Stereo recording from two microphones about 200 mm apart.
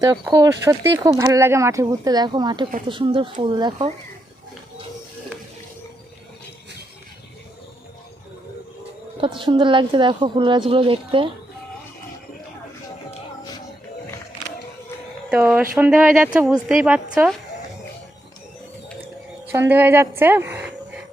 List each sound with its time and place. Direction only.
0.0 s a woman's voice: 15° right (ahead or behind)
9.4 s speech: 25° right (ahead or behind)
15.3 s a woman's voice: 5° right (ahead or behind)
19.5 s a woman's voice: 10° right (ahead or behind)